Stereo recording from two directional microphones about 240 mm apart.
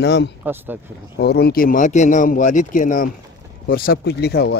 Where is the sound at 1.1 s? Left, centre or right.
Left.